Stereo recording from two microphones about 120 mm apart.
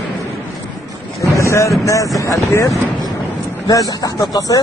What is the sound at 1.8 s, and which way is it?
Speech, 25° left (ahead or behind).